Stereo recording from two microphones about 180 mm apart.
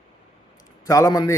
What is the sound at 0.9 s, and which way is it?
Speech, 20° left (ahead or behind).